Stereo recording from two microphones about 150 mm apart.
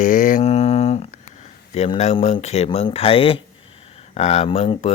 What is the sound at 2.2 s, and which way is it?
Speech, 45° left (ahead or behind).